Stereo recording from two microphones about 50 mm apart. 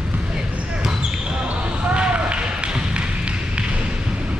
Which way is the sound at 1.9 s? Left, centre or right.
Right.